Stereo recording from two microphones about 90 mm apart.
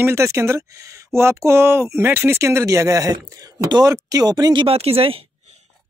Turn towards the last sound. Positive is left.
turn(degrees=-90)